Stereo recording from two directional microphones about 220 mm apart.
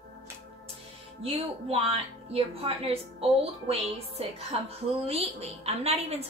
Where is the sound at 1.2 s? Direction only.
25° right (ahead or behind).